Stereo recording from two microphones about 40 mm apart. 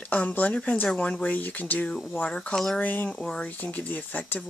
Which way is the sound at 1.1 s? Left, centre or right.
Left.